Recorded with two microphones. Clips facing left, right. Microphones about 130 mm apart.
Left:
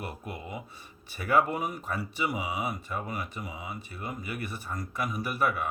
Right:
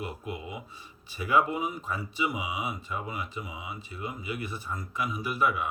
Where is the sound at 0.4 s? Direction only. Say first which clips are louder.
Even; 50° left (ahead or behind).